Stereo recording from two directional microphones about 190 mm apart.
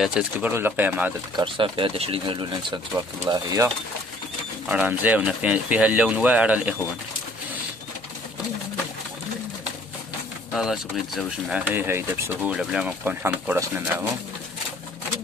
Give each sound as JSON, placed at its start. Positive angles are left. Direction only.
{"t": 0.0, "sound": "speech", "side_deg": -5}
{"t": 1.3, "sound": "speech", "side_deg": -25}
{"t": 10.5, "sound": "speech", "side_deg": 0}